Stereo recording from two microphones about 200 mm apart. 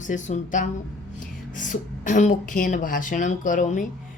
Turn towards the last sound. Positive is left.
turn(degrees=40)  # may be behind; listen again after turning